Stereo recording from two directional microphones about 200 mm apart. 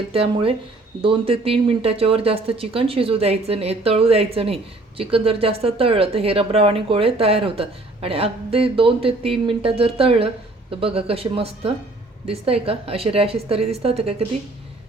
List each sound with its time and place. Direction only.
0.1 s speech: 30° right (ahead or behind)